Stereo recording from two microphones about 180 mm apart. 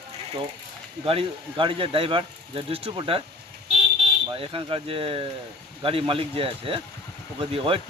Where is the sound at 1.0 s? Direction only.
30° right (ahead or behind).